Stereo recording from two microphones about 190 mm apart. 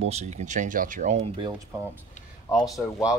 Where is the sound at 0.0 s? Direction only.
35° right (ahead or behind).